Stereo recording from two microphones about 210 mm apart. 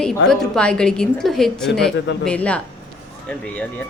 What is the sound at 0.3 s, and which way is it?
Speech, 5° left (ahead or behind).